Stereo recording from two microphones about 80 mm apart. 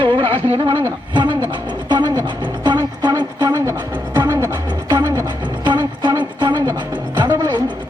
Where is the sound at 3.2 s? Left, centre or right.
Right.